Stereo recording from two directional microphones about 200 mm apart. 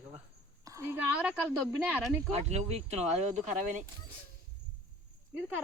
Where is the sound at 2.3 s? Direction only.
35° right (ahead or behind).